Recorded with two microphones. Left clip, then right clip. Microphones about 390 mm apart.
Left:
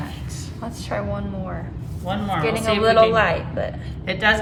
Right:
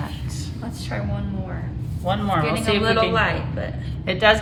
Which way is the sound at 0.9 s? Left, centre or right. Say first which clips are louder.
Left 5 dB; centre.